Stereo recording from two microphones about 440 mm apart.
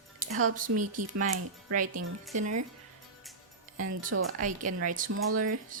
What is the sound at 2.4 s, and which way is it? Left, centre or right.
Speech, right.